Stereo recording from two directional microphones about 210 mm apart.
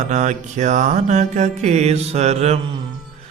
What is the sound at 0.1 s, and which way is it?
Mantra, 35° right (ahead or behind).